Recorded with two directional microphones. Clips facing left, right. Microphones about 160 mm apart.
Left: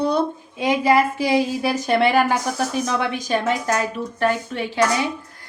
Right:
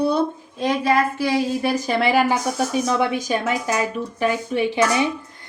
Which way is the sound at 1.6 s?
Centre (ahead or behind).